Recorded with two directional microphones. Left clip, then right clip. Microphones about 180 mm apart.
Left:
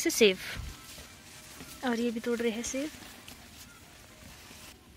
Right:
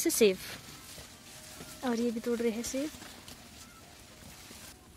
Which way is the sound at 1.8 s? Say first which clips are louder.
Left 1 dB; 5° right (ahead or behind).